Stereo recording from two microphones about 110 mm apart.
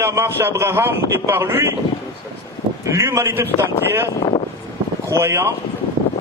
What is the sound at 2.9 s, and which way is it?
Speech, 25° right (ahead or behind).